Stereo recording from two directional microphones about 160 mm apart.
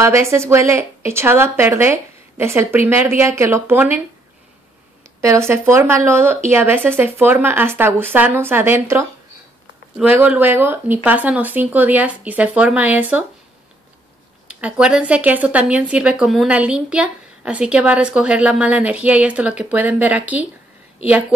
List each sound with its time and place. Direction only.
0.0 s speech: 15° right (ahead or behind)
5.2 s speech: 15° right (ahead or behind)
14.6 s speech: 5° right (ahead or behind)